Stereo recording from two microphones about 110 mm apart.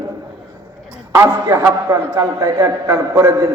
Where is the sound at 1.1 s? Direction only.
25° right (ahead or behind).